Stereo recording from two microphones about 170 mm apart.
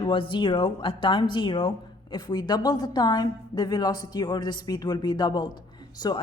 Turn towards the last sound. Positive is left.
turn(degrees=25)  # may be behind; listen again after turning